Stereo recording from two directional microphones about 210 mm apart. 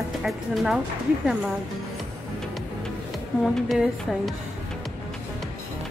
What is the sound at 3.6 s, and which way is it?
Speech, centre (ahead or behind).